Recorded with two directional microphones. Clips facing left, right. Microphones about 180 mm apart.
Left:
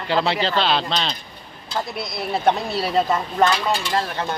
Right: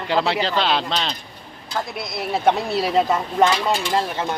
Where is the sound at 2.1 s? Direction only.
10° right (ahead or behind).